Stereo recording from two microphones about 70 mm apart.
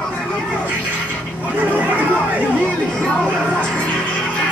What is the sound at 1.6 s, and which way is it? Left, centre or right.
Chatter, right.